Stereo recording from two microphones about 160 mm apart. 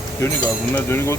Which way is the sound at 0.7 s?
15° left (ahead or behind).